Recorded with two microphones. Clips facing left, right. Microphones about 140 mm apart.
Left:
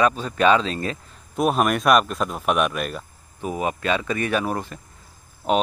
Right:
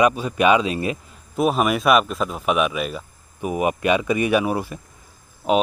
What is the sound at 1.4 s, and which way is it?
Speech, centre (ahead or behind).